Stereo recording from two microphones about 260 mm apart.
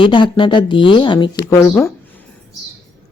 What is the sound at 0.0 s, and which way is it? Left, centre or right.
Speech, centre.